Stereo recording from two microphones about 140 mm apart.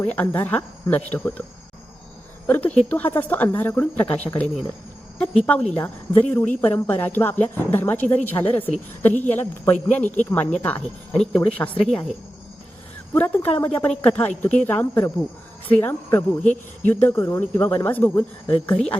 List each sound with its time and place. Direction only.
0.0 s a woman's voice: 10° left (ahead or behind)
2.5 s a woman's voice: 10° left (ahead or behind)
13.1 s a woman's voice: 10° left (ahead or behind)